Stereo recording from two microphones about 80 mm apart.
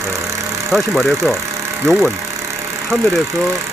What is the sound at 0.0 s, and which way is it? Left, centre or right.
Vehicle, right.